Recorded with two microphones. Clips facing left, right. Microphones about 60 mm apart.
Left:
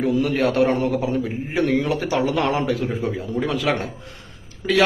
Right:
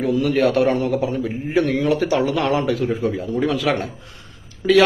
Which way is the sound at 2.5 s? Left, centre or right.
Centre.